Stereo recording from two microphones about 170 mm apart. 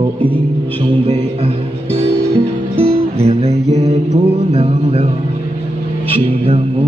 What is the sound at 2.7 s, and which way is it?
Music, 35° right (ahead or behind).